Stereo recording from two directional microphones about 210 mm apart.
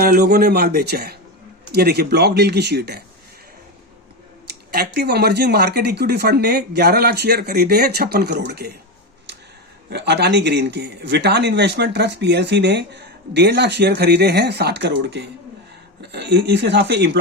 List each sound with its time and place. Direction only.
0.0 s a man's voice: 45° right (ahead or behind)
4.9 s a man's voice: 50° right (ahead or behind)
9.9 s a man's voice: 55° right (ahead or behind)